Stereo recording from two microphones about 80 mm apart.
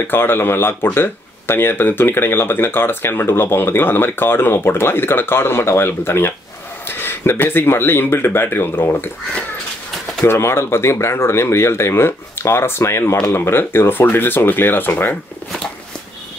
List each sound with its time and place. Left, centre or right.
0.1 s speech: left
10.2 s speech: left